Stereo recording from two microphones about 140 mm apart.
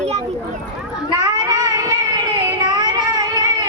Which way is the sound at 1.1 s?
25° right (ahead or behind).